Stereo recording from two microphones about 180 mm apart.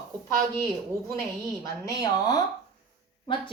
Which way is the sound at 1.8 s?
20° left (ahead or behind).